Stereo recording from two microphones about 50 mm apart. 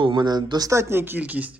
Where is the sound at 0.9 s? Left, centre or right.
Right.